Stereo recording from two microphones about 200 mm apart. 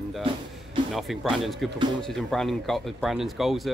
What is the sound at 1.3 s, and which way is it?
Speech, centre (ahead or behind).